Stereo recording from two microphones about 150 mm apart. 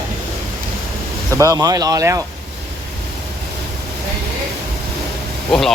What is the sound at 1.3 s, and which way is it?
Speech, 20° right (ahead or behind).